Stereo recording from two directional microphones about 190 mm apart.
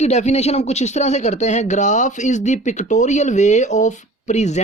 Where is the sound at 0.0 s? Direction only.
35° left (ahead or behind).